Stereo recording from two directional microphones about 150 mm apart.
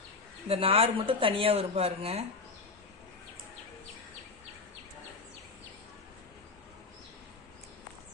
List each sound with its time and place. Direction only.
0.4 s speech: 40° right (ahead or behind)